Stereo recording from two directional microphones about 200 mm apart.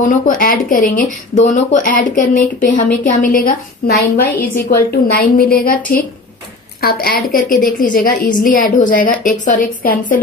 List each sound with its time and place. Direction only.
0.0 s speech: 40° left (ahead or behind)
6.8 s speech: 50° left (ahead or behind)